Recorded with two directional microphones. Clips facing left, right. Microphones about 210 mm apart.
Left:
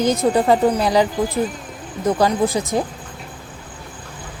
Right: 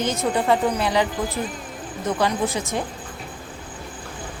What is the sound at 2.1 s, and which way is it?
Speech, 35° left (ahead or behind).